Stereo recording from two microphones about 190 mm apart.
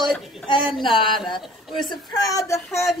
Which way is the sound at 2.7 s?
Centre (ahead or behind).